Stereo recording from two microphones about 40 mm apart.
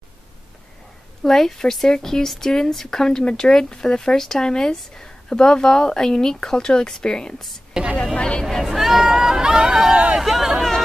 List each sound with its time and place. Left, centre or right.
1.2 s speech: centre
7.7 s a sound: right
8.2 s speech: left
8.6 s speech: centre
10.1 s chatter: centre